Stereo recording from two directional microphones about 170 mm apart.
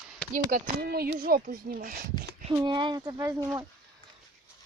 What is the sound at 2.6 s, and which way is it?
Speech, 25° right (ahead or behind).